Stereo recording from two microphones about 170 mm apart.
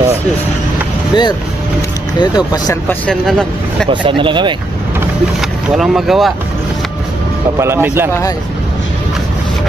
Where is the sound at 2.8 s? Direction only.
5° left (ahead or behind).